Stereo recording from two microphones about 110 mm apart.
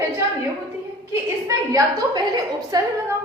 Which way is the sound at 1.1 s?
30° right (ahead or behind).